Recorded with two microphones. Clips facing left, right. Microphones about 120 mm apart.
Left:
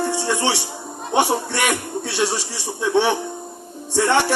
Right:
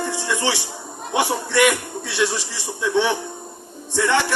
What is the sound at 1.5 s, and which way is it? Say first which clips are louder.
Speech: right 4 dB; 40° left (ahead or behind).